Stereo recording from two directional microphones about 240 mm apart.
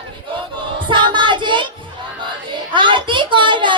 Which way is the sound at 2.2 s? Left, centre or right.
Centre.